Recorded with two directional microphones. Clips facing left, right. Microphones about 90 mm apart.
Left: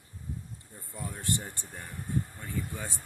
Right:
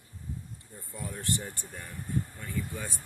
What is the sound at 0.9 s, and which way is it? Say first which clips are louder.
Speech: even; 20° left (ahead or behind).